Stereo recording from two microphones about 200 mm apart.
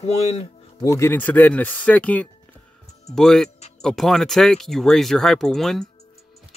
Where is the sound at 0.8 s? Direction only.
15° left (ahead or behind).